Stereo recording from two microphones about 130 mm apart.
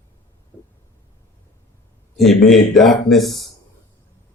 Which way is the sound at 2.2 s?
Centre (ahead or behind).